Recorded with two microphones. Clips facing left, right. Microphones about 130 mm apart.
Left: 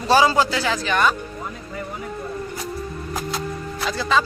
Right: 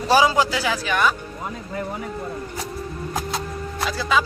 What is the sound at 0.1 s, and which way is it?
A man's voice, 10° right (ahead or behind).